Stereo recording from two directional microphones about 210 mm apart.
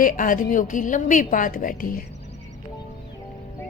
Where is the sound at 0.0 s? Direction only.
40° left (ahead or behind).